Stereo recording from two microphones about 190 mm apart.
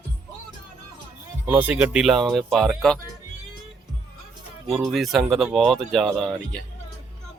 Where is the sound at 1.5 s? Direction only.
10° right (ahead or behind).